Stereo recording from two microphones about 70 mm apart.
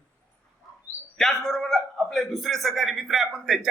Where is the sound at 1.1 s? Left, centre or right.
Centre.